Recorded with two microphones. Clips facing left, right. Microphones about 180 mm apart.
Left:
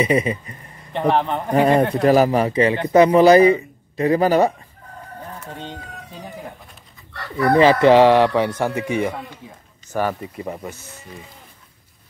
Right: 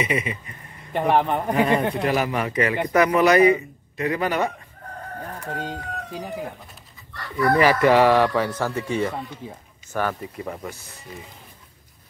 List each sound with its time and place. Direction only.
0.0 s a man's voice: 35° left (ahead or behind)
0.9 s a man's voice: 10° right (ahead or behind)
1.5 s a man's voice: 40° left (ahead or behind)
5.5 s a man's voice: 5° right (ahead or behind)
7.4 s speech: 25° left (ahead or behind)